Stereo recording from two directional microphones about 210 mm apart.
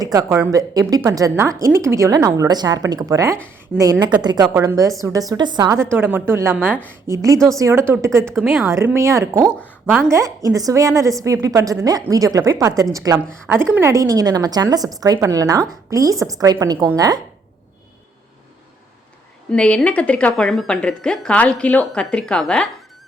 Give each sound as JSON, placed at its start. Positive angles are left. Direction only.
{"t": 0.0, "sound": "a woman's voice", "side_deg": -15}
{"t": 8.2, "sound": "speech", "side_deg": 0}
{"t": 8.7, "sound": "a woman's voice", "side_deg": -15}
{"t": 19.5, "sound": "speech", "side_deg": 5}